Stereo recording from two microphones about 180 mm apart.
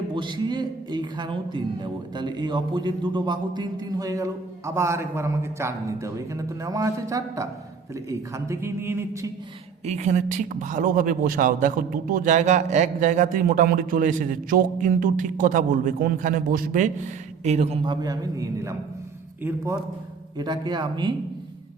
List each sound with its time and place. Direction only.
0.1 s speech: 25° right (ahead or behind)
9.8 s speech: 40° right (ahead or behind)
17.8 s speech: 20° right (ahead or behind)
20.4 s speech: 25° right (ahead or behind)